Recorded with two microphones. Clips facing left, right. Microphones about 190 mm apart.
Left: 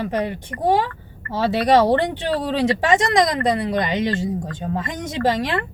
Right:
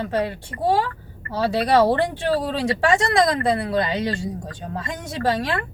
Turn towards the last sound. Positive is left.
turn(degrees=20)  # may be behind; listen again after turning